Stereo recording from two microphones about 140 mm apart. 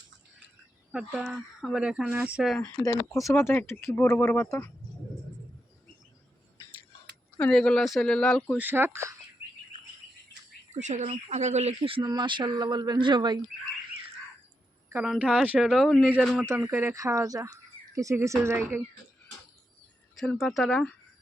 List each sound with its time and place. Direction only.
0.9 s speech: 5° right (ahead or behind)
2.6 s speech: 25° left (ahead or behind)
7.3 s speech: 10° left (ahead or behind)
8.5 s speech: 15° right (ahead or behind)
10.8 s speech: 55° right (ahead or behind)
11.8 s speech: 40° right (ahead or behind)
15.0 s speech: 5° right (ahead or behind)
16.5 s speech: 15° right (ahead or behind)
20.1 s speech: centre (ahead or behind)